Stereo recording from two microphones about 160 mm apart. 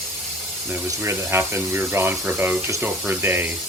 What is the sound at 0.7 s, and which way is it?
Speech, 15° right (ahead or behind).